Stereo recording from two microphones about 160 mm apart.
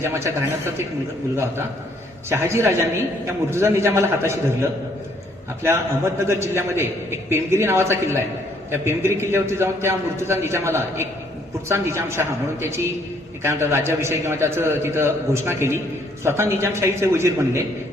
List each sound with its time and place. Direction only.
0.0 s a man's voice: 15° right (ahead or behind)
2.3 s a man's voice: 15° right (ahead or behind)